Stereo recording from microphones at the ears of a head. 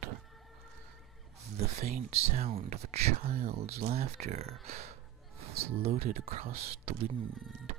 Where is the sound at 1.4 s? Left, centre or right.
Right.